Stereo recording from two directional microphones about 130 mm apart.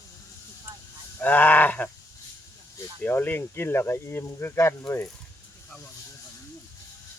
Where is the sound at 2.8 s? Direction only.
15° left (ahead or behind).